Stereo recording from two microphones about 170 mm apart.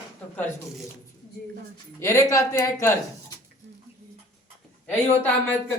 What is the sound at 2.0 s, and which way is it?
Speech, 20° left (ahead or behind).